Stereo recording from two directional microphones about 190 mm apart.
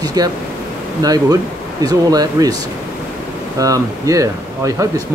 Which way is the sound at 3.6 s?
15° right (ahead or behind).